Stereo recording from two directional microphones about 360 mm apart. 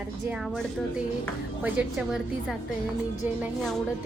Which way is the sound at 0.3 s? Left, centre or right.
Centre.